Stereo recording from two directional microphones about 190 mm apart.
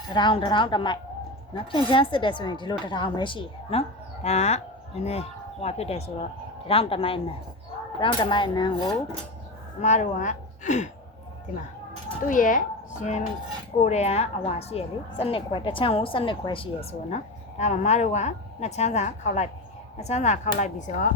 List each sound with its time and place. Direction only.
0.1 s a woman's voice: 25° left (ahead or behind)
9.8 s a woman's voice: 40° left (ahead or behind)
12.2 s a woman's voice: 45° left (ahead or behind); by 16.6 s 25° left (ahead or behind)
17.6 s a woman's voice: 35° left (ahead or behind)